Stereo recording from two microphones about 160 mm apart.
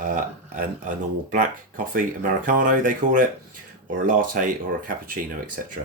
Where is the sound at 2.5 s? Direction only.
55° right (ahead or behind).